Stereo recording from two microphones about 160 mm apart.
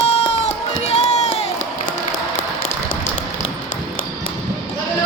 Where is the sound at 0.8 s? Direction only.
40° left (ahead or behind).